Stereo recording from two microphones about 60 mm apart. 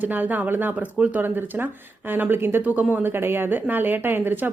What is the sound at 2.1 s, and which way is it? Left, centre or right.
Speech, right.